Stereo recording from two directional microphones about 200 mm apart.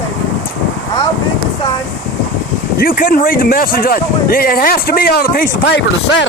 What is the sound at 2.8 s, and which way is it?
Speech, 45° left (ahead or behind).